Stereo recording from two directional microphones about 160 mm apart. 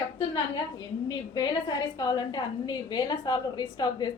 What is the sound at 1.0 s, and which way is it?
A woman's voice, 25° left (ahead or behind).